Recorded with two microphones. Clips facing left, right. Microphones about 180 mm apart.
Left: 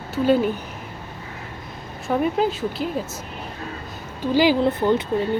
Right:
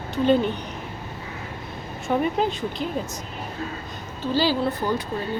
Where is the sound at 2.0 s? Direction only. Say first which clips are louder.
Left 2 dB; centre (ahead or behind).